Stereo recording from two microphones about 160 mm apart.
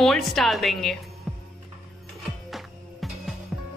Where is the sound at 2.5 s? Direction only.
Centre (ahead or behind).